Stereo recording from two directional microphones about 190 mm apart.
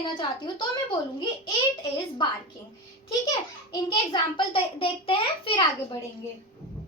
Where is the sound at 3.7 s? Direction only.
25° left (ahead or behind).